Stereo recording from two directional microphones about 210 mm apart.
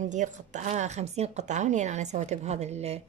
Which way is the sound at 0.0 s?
35° right (ahead or behind).